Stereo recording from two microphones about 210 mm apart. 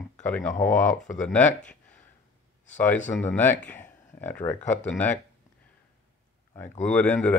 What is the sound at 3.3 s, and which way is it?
Speech, 10° left (ahead or behind).